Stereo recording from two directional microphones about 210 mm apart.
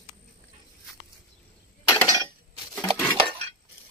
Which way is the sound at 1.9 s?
15° left (ahead or behind).